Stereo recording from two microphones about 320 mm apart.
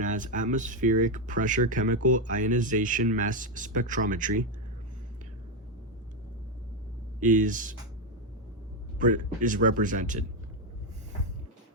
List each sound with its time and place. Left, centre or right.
0.0 s speech: right
7.2 s speech: right
9.0 s speech: right